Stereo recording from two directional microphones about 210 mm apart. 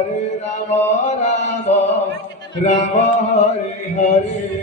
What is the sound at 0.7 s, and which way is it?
Mantra, 35° left (ahead or behind).